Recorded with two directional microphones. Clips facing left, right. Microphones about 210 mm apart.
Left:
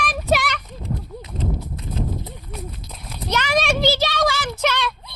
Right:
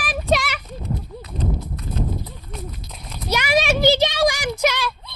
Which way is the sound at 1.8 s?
25° left (ahead or behind).